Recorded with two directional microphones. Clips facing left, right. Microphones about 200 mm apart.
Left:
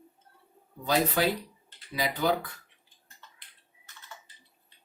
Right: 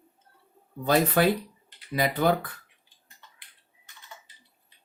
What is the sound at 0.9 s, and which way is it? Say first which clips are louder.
Speech: right 4 dB; 55° right (ahead or behind).